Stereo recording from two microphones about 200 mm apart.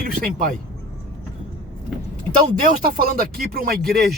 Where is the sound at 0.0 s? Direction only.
45° right (ahead or behind).